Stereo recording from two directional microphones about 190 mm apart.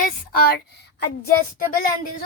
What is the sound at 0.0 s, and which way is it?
Speech, 50° left (ahead or behind).